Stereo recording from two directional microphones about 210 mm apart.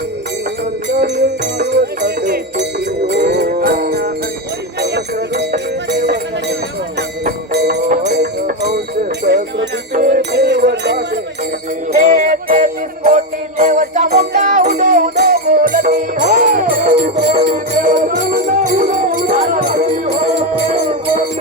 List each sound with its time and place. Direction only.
0.9 s music: 55° right (ahead or behind)
4.8 s jingle bell: 50° right (ahead or behind)
5.9 s music: 55° right (ahead or behind)
11.9 s music: 35° right (ahead or behind)